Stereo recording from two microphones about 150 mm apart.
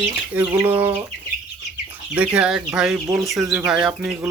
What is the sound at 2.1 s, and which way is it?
Speech, 10° right (ahead or behind).